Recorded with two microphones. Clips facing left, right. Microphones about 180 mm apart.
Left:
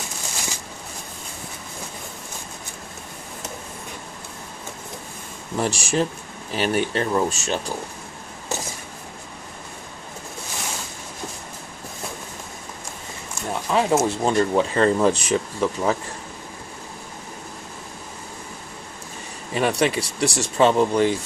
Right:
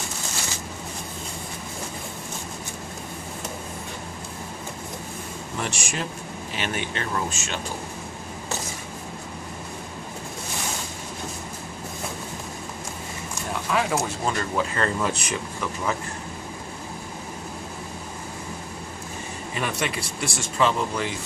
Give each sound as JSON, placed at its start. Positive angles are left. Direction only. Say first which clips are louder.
{"t": 5.5, "sound": "speech", "louder": "left 8 dB", "side_deg": 35}
{"t": 13.7, "sound": "speech", "louder": "left 6 dB", "side_deg": 30}
{"t": 19.5, "sound": "speech", "louder": "left 8 dB", "side_deg": 35}